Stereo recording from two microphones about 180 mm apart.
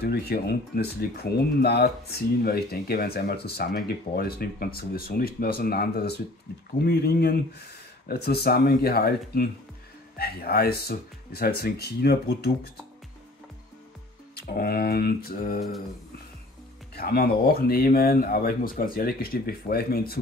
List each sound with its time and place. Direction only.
0.0 s speech: 60° left (ahead or behind)
14.3 s speech: 60° left (ahead or behind)
16.9 s speech: 60° left (ahead or behind)